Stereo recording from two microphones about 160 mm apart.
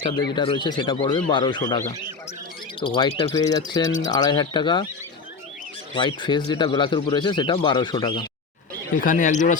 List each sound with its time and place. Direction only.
0.3 s speech: 30° left (ahead or behind)
3.2 s speech: 20° left (ahead or behind)
5.9 s speech: 30° left (ahead or behind)
9.0 s speech: 55° left (ahead or behind)